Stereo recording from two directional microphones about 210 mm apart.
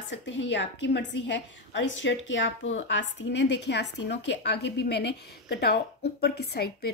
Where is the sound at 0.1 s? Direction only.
60° left (ahead or behind).